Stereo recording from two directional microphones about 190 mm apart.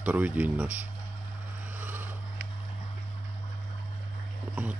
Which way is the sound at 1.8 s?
10° right (ahead or behind).